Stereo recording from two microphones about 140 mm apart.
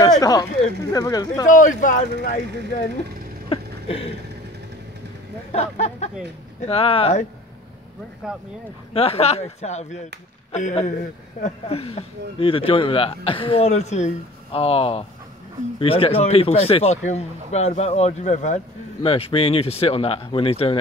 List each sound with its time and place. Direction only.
0.0 s speech: 25° left (ahead or behind)
1.5 s speech: 65° left (ahead or behind)
3.4 s a sound: 40° left (ahead or behind)
5.5 s speech: 50° left (ahead or behind)
8.2 s speech: 5° right (ahead or behind)
8.9 s speech: 45° left (ahead or behind)
19.0 s speech: 45° left (ahead or behind)